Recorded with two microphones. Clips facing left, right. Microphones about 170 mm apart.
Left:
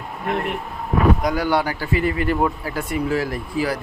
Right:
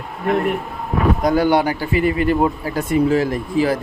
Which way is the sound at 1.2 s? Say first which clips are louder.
Right 5 dB; 25° right (ahead or behind).